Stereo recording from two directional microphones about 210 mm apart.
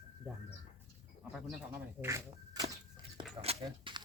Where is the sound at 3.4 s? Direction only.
30° right (ahead or behind).